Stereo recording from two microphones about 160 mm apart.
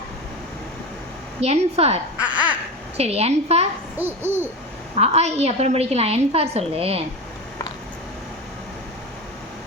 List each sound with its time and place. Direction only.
1.4 s a woman's voice: 40° right (ahead or behind)
2.2 s babbling: 10° right (ahead or behind)
3.0 s a woman's voice: 40° right (ahead or behind)
3.9 s babbling: 15° right (ahead or behind)
4.9 s a woman's voice: 40° right (ahead or behind)